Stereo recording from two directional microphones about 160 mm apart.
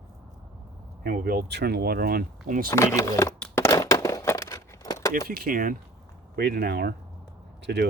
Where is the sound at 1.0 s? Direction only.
65° right (ahead or behind).